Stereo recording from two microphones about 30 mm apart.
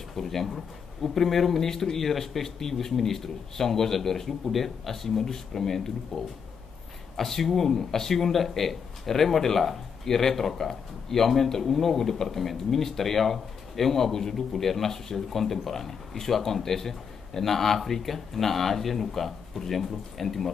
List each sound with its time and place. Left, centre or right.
0.1 s speech: centre
1.7 s speech: centre